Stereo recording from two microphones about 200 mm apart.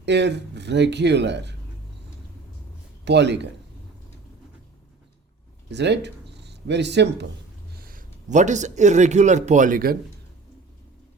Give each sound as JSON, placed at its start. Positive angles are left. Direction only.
{"t": 0.0, "sound": "speech", "side_deg": -60}
{"t": 3.0, "sound": "a man's voice", "side_deg": -60}
{"t": 5.7, "sound": "speech", "side_deg": -60}
{"t": 7.8, "sound": "speech", "side_deg": -45}